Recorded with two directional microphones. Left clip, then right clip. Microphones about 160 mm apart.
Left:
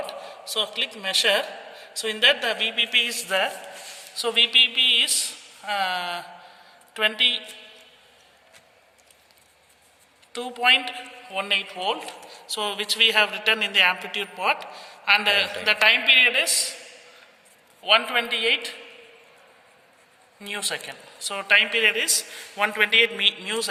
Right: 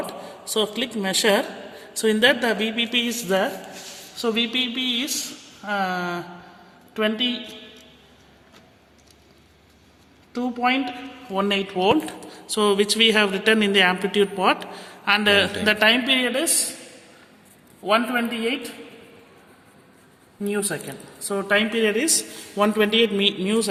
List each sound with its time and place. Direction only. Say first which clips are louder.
0.0 s a man's voice: right 1 dB; 30° right (ahead or behind)
10.3 s speech: left 3 dB; 15° right (ahead or behind)
11.3 s speech: right 2 dB; 40° right (ahead or behind)
17.9 s speech: left 1 dB; 10° right (ahead or behind)
20.4 s speech: right 3 dB; 10° right (ahead or behind)
21.6 s speech: left 1 dB; 35° right (ahead or behind)